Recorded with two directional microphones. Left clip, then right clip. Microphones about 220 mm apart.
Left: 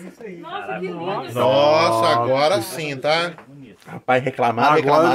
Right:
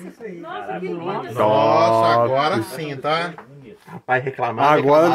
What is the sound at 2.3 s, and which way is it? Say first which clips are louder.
Speech: left 1 dB; 45° left (ahead or behind).